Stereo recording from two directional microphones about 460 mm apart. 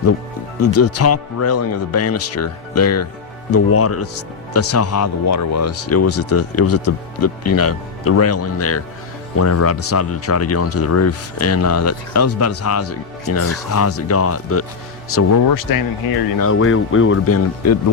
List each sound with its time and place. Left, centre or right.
0.6 s speech: left
15.1 s speech: left
16.4 s speech: left